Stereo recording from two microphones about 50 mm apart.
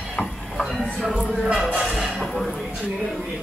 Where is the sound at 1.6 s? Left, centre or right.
Centre.